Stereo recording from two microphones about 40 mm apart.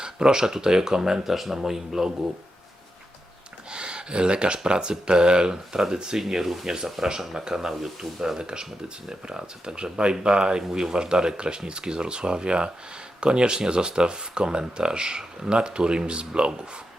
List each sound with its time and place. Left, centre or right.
0.0 s speech: centre
3.7 s speech: right; by 6.7 s centre
6.7 s speech: centre